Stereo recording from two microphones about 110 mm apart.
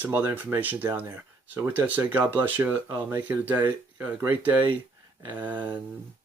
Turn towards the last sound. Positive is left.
turn(degrees=-15)  # may be behind; listen again after turning